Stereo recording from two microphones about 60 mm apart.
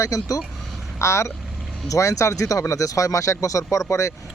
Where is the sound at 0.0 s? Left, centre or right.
Left.